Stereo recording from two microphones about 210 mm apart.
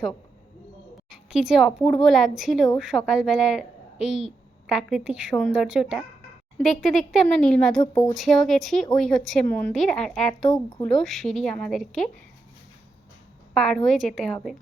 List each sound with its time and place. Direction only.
1.1 s a woman's voice: 5° right (ahead or behind)
13.5 s a woman's voice: centre (ahead or behind)